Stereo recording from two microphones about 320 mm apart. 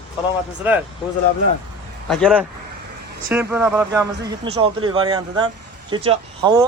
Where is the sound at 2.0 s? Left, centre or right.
Centre.